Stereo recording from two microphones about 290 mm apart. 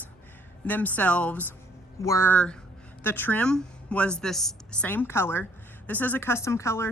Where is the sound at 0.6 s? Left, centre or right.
Centre.